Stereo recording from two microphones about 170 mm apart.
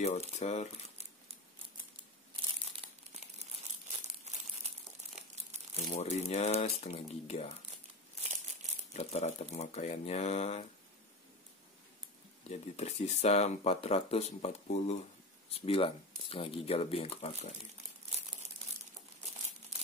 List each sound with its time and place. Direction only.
0.4 s speech: 40° left (ahead or behind)
4.0 s crumpling: 40° right (ahead or behind)
5.8 s speech: 40° left (ahead or behind)
8.9 s speech: 40° left (ahead or behind)
12.4 s speech: 40° left (ahead or behind)